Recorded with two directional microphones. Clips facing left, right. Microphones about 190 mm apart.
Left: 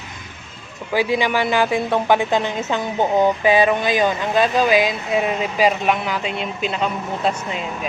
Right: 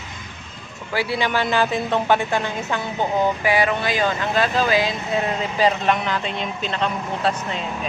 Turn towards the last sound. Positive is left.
turn(degrees=10)  # may be behind; listen again after turning